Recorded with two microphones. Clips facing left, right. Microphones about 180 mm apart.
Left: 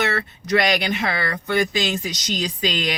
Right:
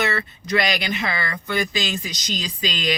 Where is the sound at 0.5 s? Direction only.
60° left (ahead or behind).